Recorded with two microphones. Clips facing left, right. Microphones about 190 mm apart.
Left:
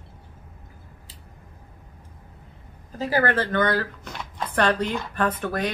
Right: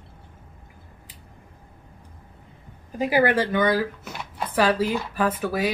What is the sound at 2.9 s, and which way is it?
Speech, 15° right (ahead or behind).